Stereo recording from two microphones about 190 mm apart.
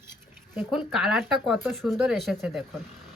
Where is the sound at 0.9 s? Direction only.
Centre (ahead or behind).